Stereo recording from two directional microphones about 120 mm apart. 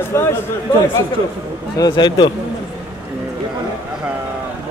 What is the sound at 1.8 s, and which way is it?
Speech, 40° left (ahead or behind).